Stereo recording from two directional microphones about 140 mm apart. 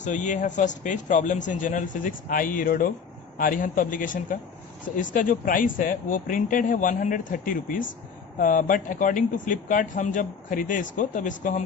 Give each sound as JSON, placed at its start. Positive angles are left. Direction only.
{"t": 0.0, "sound": "speech", "side_deg": 60}